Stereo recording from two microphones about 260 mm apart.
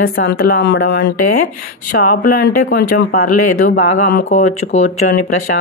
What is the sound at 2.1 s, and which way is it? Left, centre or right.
Speech, left.